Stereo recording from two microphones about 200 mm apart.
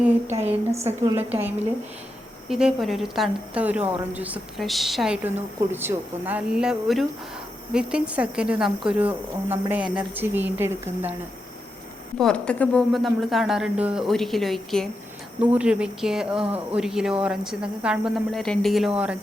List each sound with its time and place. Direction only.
0.3 s a woman's voice: 30° right (ahead or behind)
1.0 s speech: 10° right (ahead or behind)
12.1 s speech: 5° left (ahead or behind)